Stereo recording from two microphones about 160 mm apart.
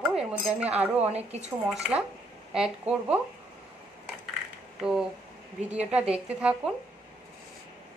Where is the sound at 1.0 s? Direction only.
40° right (ahead or behind).